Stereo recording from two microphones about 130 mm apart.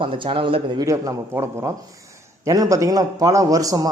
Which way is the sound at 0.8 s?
25° right (ahead or behind).